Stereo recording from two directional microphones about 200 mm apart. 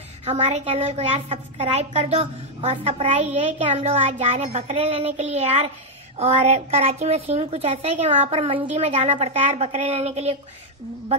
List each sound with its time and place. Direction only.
0.2 s a woman's voice: 35° right (ahead or behind)